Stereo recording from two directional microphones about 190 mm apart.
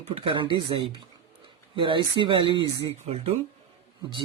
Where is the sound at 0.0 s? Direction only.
30° right (ahead or behind).